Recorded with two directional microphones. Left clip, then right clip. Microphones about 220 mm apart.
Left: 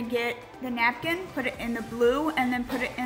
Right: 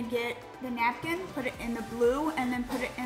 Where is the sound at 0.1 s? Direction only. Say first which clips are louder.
Left 4 dB; 5° left (ahead or behind).